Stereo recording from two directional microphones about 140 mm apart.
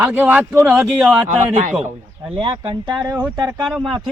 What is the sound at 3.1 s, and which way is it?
Speech, 15° right (ahead or behind).